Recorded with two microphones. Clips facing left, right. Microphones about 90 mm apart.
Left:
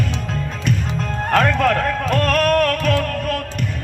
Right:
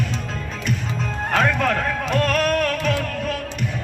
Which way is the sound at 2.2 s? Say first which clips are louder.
Left 4 dB; 55° left (ahead or behind).